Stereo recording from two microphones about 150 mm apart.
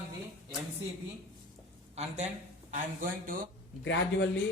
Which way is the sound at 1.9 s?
50° right (ahead or behind).